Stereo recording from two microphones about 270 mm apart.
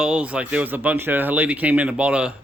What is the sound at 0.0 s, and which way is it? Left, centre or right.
Speech, centre.